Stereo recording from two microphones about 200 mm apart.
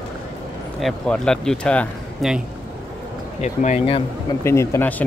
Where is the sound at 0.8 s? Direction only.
5° left (ahead or behind).